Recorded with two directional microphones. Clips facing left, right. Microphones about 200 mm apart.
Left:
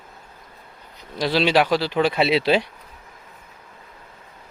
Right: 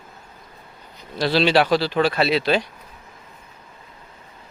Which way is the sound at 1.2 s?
10° left (ahead or behind).